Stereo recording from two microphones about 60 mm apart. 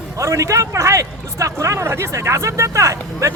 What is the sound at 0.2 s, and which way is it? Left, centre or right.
Speech, right.